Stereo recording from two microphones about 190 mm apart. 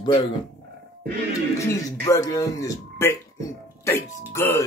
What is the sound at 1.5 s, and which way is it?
Speech, 15° left (ahead or behind).